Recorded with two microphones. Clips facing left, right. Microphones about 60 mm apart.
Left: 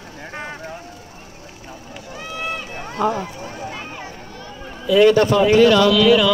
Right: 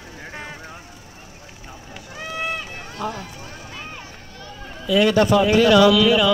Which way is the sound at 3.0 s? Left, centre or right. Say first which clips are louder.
Left 8 dB; left.